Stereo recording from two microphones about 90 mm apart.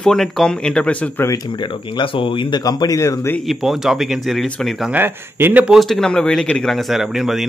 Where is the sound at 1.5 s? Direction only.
60° left (ahead or behind); by 3.3 s 35° left (ahead or behind).